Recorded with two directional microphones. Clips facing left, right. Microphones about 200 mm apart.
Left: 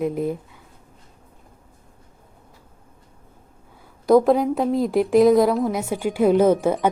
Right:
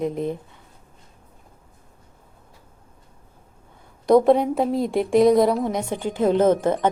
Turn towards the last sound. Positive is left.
turn(degrees=10)  # may be behind; listen again after turning